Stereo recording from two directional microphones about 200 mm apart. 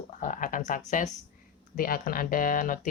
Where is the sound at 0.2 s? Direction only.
40° left (ahead or behind).